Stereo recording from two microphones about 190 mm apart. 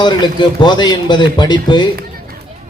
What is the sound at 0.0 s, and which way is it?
A man's voice, 25° left (ahead or behind).